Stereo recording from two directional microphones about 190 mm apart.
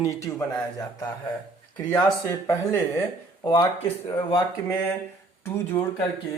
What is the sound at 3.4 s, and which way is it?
Speech, 25° left (ahead or behind).